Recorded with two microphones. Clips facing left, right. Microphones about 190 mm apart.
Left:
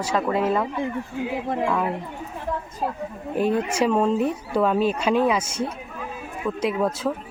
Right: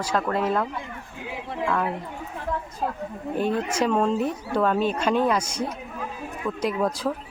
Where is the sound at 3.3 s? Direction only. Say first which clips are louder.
Left 3 dB; 5° left (ahead or behind).